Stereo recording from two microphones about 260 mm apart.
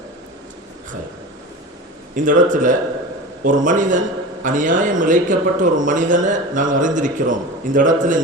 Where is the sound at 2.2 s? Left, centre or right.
Right.